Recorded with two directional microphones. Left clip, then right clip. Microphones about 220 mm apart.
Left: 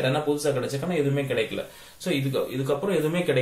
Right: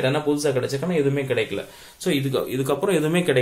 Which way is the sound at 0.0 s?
45° right (ahead or behind).